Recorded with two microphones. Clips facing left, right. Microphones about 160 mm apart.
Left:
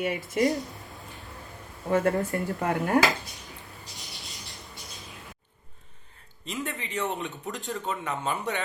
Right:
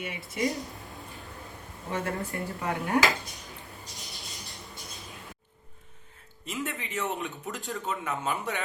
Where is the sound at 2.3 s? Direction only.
50° left (ahead or behind).